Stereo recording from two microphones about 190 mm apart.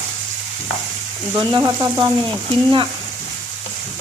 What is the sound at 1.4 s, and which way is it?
Sizzle, 20° right (ahead or behind).